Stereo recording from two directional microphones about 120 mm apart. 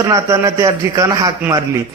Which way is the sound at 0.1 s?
25° right (ahead or behind).